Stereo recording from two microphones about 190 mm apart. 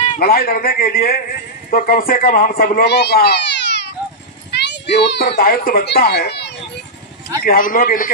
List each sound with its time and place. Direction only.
0.2 s a man's voice: 50° left (ahead or behind)
4.5 s children playing: 65° left (ahead or behind)
4.9 s speech: 60° left (ahead or behind)
7.4 s a man's voice: 45° left (ahead or behind)